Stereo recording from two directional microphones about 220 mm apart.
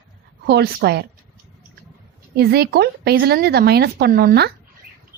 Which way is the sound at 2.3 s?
45° right (ahead or behind).